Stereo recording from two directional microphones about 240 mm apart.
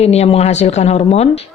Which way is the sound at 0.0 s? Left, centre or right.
Left.